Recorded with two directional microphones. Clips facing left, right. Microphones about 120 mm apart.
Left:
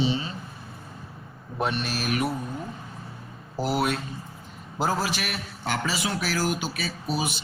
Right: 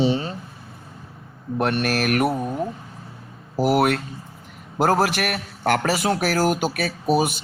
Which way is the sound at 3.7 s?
65° right (ahead or behind).